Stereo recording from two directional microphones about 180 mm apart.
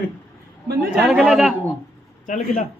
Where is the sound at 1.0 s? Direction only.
5° right (ahead or behind).